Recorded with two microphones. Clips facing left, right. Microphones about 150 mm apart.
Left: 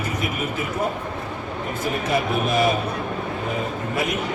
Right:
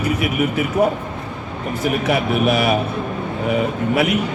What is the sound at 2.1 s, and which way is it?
Speech, 70° right (ahead or behind).